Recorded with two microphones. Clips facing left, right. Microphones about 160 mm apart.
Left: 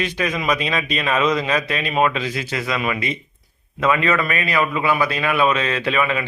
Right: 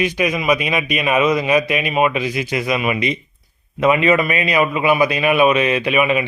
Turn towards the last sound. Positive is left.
turn(degrees=-15)  # may be behind; listen again after turning